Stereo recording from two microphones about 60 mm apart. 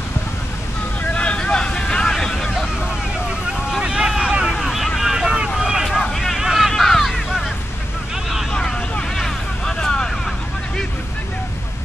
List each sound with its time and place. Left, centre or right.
1.1 s vehicle: centre
3.7 s vehicle: centre
4.5 s vehicle: centre
5.9 s vehicle: centre
6.7 s a sound: centre
8.6 s vehicle: centre